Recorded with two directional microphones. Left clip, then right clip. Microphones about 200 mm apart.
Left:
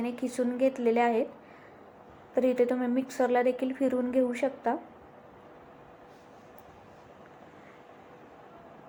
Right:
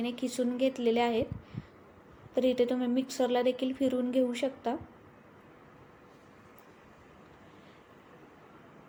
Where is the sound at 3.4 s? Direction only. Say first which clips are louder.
Left 2 dB; 20° left (ahead or behind).